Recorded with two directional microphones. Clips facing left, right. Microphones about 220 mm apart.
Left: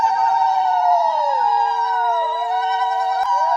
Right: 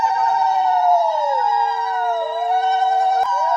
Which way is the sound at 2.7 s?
30° right (ahead or behind).